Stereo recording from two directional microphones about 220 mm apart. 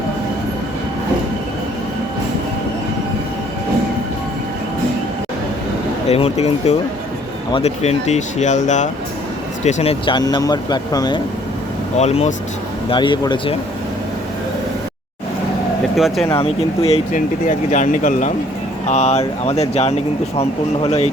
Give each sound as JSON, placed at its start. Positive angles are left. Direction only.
{"t": 6.1, "sound": "speech", "side_deg": 25}
{"t": 11.9, "sound": "speech", "side_deg": 30}
{"t": 16.0, "sound": "speech", "side_deg": 0}
{"t": 16.3, "sound": "speech", "side_deg": 25}